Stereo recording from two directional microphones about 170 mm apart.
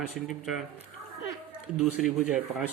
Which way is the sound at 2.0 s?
5° right (ahead or behind).